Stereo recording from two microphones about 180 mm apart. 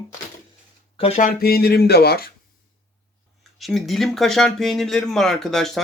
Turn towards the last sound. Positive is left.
turn(degrees=0)  # may be behind; listen again after turning